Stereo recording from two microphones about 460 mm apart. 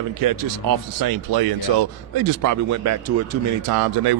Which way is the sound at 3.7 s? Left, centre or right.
Right.